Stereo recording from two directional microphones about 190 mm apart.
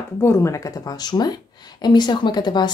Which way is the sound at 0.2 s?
15° left (ahead or behind).